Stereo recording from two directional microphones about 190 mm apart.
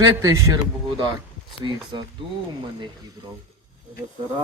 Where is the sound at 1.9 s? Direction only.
25° right (ahead or behind).